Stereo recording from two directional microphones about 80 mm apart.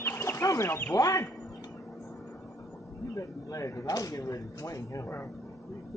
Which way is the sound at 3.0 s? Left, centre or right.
Left.